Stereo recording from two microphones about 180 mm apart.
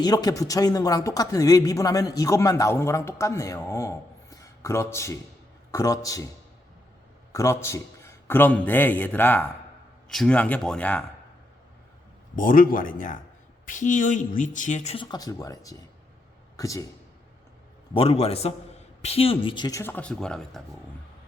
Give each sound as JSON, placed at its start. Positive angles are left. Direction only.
{"t": 0.0, "sound": "speech", "side_deg": 20}
{"t": 7.3, "sound": "a man's voice", "side_deg": 15}
{"t": 12.4, "sound": "speech", "side_deg": 50}
{"t": 14.9, "sound": "speech", "side_deg": 25}
{"t": 17.9, "sound": "a man's voice", "side_deg": 35}